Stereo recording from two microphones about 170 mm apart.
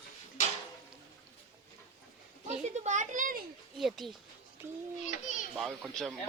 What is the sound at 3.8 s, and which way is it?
Speech, centre (ahead or behind).